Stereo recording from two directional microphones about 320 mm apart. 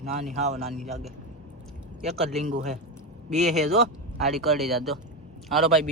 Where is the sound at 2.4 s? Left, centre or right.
Right.